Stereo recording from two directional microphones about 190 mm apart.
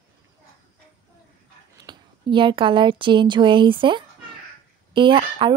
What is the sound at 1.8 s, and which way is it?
Speech, 25° right (ahead or behind).